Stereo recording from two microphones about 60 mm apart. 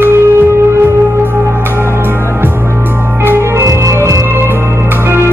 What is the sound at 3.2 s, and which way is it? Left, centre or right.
Organ, right.